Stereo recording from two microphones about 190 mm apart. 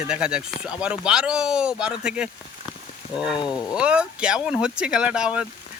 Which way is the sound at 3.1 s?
25° left (ahead or behind).